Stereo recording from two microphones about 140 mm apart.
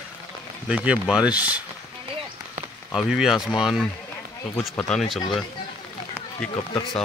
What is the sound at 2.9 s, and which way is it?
Speech, 5° right (ahead or behind).